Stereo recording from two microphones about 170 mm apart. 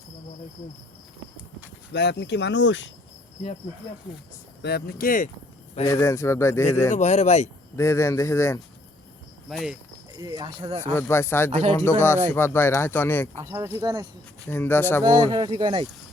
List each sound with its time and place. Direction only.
1.9 s speech: 85° left
4.6 s speech: 70° left (ahead or behind)
5.8 s speech: 15° left (ahead or behind)
6.9 s speech: 40° left (ahead or behind)
7.8 s speech: 15° left (ahead or behind)
9.5 s speech: centre (ahead or behind)
10.1 s speech: 20° right (ahead or behind)
10.9 s speech: 15° left (ahead or behind)
13.4 s speech: 15° right (ahead or behind)
14.5 s speech: 10° left (ahead or behind)
15.0 s speech: 25° right (ahead or behind)